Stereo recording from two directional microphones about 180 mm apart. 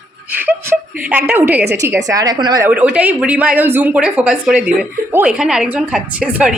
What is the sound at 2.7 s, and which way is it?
A woman's voice, 5° right (ahead or behind).